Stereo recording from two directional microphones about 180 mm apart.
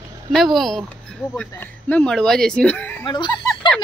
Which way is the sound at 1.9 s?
5° left (ahead or behind).